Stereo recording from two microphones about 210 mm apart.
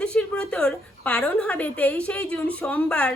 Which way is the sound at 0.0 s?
5° left (ahead or behind).